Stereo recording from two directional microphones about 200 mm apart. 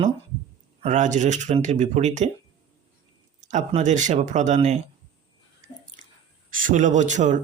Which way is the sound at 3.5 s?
35° right (ahead or behind).